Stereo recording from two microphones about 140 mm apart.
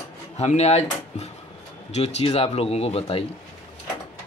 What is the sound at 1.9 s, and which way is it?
Speech, 50° left (ahead or behind).